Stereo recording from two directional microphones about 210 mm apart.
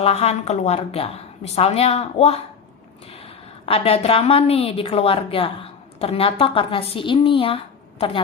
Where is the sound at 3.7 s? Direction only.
25° left (ahead or behind).